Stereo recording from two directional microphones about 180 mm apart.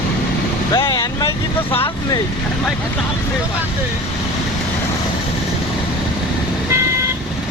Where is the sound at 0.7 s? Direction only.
20° left (ahead or behind).